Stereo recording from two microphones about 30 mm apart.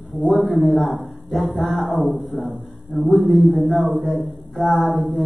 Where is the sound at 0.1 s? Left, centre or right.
Left.